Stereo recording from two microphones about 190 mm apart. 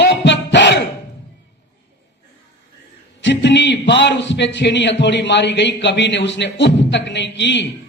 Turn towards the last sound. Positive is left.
turn(degrees=65)  # may be behind; listen again after turning